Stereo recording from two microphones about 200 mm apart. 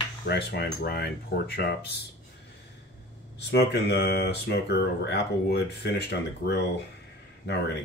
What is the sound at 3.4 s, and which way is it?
Speech, 55° left (ahead or behind).